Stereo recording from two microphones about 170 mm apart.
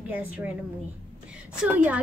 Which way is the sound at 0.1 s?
10° right (ahead or behind).